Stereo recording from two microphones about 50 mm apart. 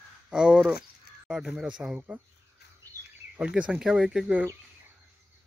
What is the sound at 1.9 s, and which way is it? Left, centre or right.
Speech, right.